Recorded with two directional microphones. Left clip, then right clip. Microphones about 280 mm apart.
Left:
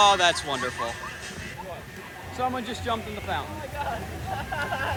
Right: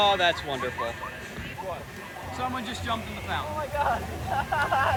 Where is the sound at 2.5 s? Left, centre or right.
Centre.